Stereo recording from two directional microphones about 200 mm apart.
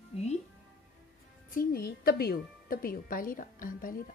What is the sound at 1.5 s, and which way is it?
A woman's voice, 50° left (ahead or behind).